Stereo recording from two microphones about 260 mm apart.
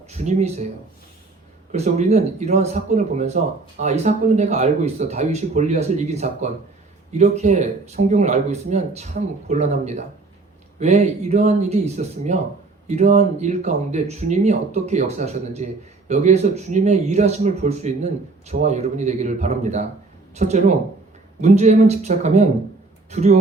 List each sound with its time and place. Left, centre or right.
0.3 s speech: right
1.7 s speech: right